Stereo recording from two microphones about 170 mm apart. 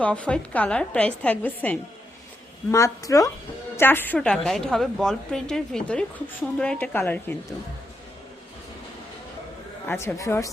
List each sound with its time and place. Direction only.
0.0 s a woman's voice: 5° left (ahead or behind)
9.8 s a woman's voice: 10° left (ahead or behind)